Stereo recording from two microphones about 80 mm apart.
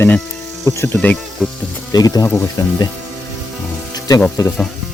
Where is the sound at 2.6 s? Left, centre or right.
Left.